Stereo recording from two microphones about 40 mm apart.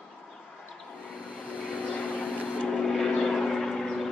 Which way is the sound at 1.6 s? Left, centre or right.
Right.